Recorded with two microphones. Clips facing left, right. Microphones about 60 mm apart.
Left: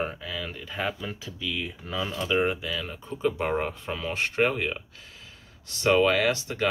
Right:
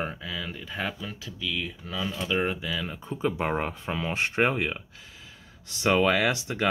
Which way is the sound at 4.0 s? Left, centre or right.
Right.